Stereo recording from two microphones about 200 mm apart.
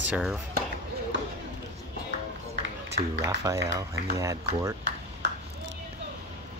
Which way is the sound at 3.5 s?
15° right (ahead or behind).